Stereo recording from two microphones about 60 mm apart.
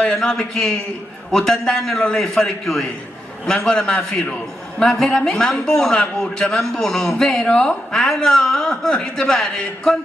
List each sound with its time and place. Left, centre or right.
0.2 s a man's voice: centre